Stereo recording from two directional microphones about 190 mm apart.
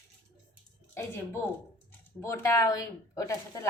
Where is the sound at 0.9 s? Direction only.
15° left (ahead or behind).